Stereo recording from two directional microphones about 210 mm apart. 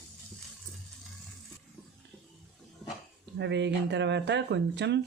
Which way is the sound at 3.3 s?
55° right (ahead or behind).